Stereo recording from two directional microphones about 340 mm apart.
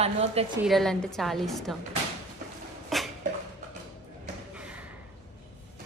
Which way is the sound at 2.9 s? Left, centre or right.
Centre.